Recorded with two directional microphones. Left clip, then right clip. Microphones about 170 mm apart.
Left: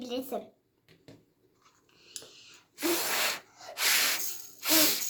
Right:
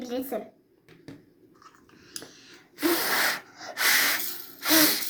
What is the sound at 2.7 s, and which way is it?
Gasp, 40° left (ahead or behind).